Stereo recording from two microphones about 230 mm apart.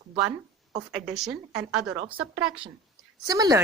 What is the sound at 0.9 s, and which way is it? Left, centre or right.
Speech, centre.